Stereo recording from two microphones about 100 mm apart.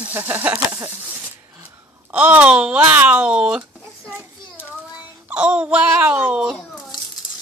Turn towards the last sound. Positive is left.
turn(degrees=-10)  # may be behind; listen again after turning